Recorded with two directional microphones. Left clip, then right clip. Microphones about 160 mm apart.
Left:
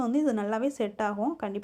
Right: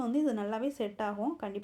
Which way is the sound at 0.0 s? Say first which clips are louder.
Left 4 dB; 30° left (ahead or behind).